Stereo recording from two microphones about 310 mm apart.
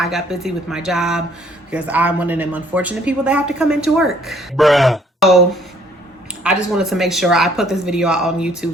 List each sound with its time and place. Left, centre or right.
0.0 s a woman's voice: centre
6.4 s a woman's voice: centre